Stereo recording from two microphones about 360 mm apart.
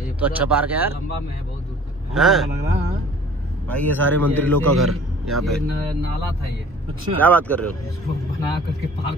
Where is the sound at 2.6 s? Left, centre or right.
Centre.